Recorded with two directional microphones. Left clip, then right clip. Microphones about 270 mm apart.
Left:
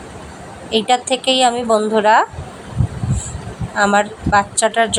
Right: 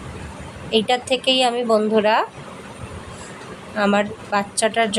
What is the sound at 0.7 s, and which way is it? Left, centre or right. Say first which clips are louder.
A woman's voice: left 3 dB; centre.